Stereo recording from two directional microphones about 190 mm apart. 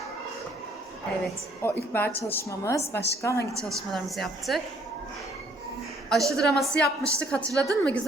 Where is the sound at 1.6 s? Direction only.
10° left (ahead or behind).